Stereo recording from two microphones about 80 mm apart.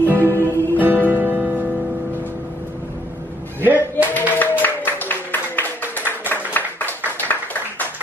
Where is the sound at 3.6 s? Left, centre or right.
Right.